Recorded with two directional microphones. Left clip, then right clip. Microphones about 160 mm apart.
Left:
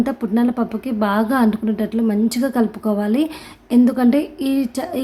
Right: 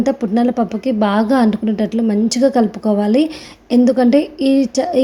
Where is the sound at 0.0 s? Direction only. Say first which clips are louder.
Right 4 dB; 15° right (ahead or behind).